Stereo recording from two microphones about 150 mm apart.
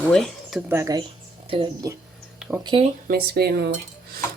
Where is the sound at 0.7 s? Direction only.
20° right (ahead or behind).